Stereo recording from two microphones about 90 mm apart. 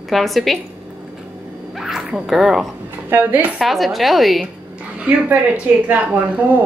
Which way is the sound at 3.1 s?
20° right (ahead or behind).